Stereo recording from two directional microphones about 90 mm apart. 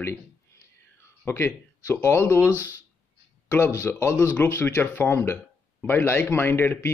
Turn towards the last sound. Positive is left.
turn(degrees=25)  # may be behind; listen again after turning